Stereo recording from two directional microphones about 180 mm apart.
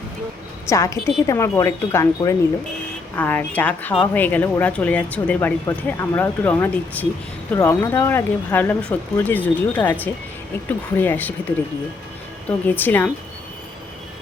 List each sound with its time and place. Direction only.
0.7 s speech: 15° left (ahead or behind)